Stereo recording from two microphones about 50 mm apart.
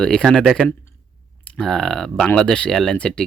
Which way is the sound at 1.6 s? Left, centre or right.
Centre.